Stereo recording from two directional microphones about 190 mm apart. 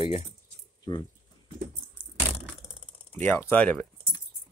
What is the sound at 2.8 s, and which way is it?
Speech, 10° left (ahead or behind).